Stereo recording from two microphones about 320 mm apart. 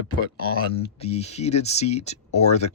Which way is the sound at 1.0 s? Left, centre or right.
Centre.